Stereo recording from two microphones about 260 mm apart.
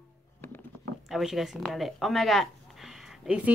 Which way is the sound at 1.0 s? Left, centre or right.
Centre.